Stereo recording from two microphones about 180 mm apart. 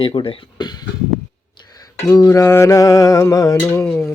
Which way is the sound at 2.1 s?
20° left (ahead or behind).